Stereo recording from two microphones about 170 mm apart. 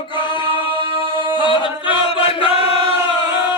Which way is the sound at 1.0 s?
30° right (ahead or behind).